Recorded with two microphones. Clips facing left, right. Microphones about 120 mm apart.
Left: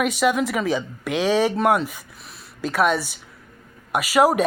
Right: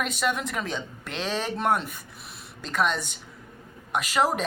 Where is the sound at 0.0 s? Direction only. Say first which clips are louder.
Left 7 dB; 10° left (ahead or behind).